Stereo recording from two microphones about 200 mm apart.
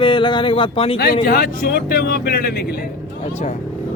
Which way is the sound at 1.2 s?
50° left (ahead or behind).